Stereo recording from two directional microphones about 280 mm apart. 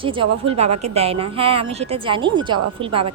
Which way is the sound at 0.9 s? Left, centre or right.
Right.